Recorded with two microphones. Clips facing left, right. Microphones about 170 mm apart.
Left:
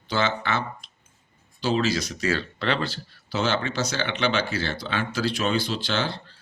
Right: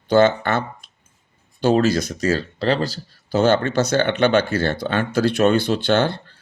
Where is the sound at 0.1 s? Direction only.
50° right (ahead or behind).